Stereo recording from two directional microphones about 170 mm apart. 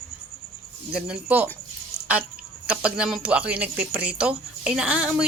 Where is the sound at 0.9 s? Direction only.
5° right (ahead or behind).